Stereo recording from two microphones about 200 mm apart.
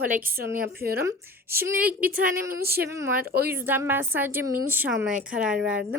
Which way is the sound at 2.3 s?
50° right (ahead or behind).